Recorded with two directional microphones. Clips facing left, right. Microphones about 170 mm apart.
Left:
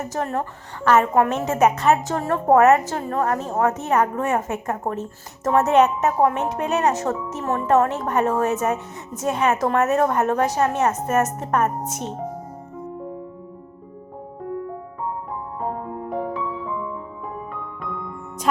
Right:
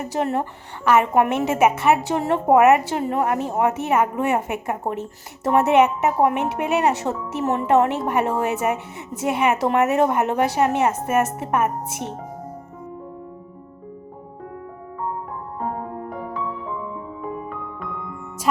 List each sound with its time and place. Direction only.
0.0 s a woman's voice: 15° right (ahead or behind)
16.0 s music: centre (ahead or behind)